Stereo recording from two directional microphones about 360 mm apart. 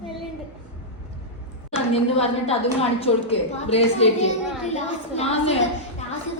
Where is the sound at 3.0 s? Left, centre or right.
Centre.